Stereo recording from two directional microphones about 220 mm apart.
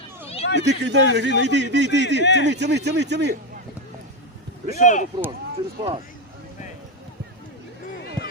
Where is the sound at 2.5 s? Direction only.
50° right (ahead or behind).